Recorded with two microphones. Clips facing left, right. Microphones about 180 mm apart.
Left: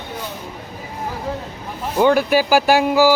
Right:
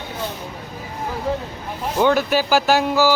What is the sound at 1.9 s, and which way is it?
Speech, 10° left (ahead or behind).